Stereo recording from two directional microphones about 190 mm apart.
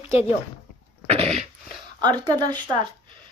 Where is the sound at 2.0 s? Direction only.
20° right (ahead or behind).